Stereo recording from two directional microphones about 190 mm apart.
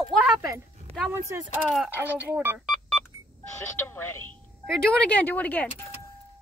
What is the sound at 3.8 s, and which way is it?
Speech, 10° left (ahead or behind).